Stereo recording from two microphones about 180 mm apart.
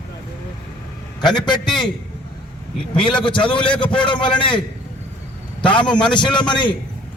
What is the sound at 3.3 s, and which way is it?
A man's voice, 25° left (ahead or behind).